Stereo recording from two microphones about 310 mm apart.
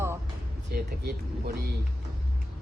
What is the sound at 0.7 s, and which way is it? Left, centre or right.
Speech, right.